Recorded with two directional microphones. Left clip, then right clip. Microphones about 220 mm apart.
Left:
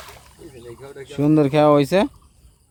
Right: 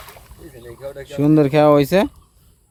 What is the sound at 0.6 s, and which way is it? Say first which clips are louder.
Speech: right 6 dB; 40° right (ahead or behind).